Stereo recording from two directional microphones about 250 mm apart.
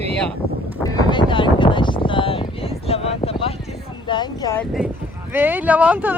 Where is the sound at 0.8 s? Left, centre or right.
Centre.